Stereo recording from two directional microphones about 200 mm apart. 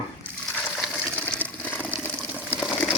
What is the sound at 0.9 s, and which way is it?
Water, 10° left (ahead or behind).